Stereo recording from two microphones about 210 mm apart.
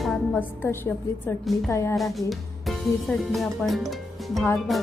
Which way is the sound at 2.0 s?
Centre (ahead or behind).